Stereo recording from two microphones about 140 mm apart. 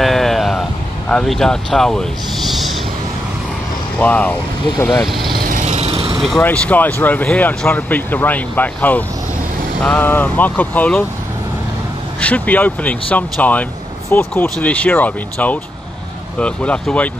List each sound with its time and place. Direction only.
0.0 s sheep: centre (ahead or behind)
4.0 s speech: 15° left (ahead or behind)
5.0 s speech: centre (ahead or behind)
5.3 s vehicle: 80° right; by 6.2 s 40° right (ahead or behind)
6.4 s speech: 10° left (ahead or behind)
12.2 s speech: 10° left (ahead or behind)